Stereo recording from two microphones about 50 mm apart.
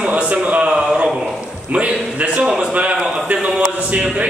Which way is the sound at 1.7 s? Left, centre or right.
Right.